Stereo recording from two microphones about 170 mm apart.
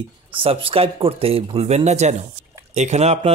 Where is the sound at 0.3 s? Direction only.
30° right (ahead or behind).